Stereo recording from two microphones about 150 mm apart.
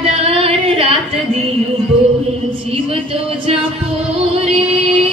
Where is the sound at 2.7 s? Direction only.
40° right (ahead or behind).